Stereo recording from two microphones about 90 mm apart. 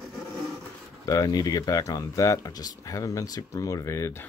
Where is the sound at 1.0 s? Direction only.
45° left (ahead or behind).